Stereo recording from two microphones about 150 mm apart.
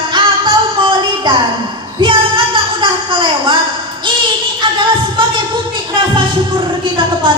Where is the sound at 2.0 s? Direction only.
35° right (ahead or behind).